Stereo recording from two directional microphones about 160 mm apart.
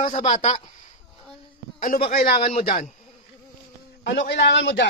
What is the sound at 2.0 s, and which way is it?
Speech, 65° left (ahead or behind).